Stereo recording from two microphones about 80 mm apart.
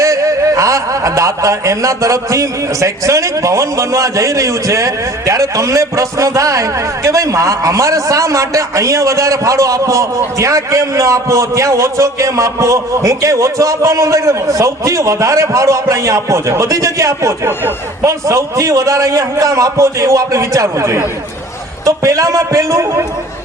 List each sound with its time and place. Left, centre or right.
0.0 s a man's voice: right